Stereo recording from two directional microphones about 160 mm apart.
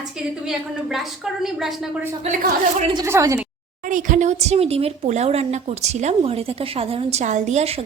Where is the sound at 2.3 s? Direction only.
40° right (ahead or behind).